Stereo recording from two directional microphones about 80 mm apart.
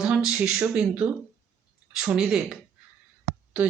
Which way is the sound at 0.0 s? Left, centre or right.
Centre.